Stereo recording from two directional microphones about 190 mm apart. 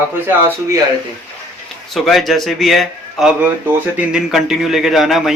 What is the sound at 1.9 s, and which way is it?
A man's voice, centre (ahead or behind).